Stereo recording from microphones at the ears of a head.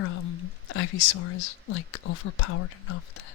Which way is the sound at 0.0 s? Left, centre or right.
Left.